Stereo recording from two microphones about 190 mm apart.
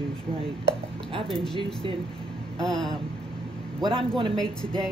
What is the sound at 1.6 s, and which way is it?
Speech, 30° right (ahead or behind).